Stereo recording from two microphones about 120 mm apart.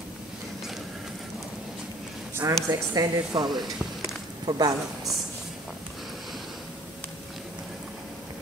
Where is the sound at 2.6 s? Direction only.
30° right (ahead or behind).